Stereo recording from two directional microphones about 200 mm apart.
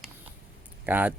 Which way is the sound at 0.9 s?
10° right (ahead or behind).